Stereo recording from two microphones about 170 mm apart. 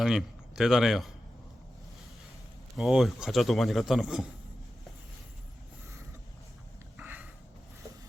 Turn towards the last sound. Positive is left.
turn(degrees=-10)  # may be behind; listen again after turning